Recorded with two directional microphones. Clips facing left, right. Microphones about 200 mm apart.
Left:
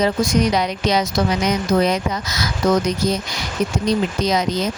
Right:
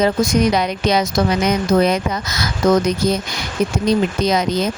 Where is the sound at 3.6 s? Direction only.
55° right (ahead or behind).